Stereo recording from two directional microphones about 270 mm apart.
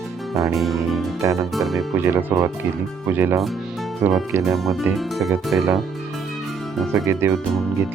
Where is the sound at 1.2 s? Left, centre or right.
Centre.